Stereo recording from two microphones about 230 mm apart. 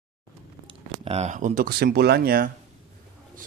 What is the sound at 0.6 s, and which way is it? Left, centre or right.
A man's voice, right.